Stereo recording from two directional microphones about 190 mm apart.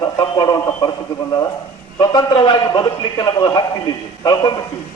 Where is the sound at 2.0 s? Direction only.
20° left (ahead or behind).